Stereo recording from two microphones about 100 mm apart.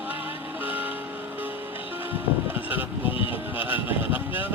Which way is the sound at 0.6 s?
15° right (ahead or behind).